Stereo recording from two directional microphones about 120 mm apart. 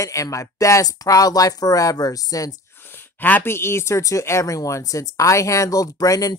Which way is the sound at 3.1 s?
15° left (ahead or behind).